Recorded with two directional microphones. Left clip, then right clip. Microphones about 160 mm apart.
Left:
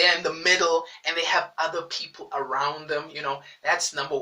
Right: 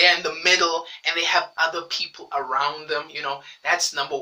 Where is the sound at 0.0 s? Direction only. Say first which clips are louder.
Right 3 dB; 15° right (ahead or behind).